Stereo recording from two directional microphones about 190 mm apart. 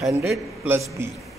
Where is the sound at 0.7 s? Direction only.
15° right (ahead or behind).